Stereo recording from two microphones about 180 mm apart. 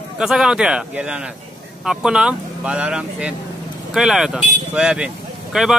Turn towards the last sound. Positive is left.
turn(degrees=-5)  # may be behind; listen again after turning